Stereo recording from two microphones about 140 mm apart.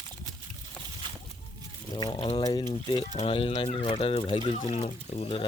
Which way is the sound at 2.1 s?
40° left (ahead or behind).